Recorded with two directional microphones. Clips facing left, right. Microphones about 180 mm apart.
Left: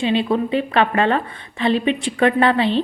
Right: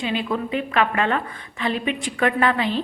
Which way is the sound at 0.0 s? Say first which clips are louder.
Left 6 dB; 25° left (ahead or behind).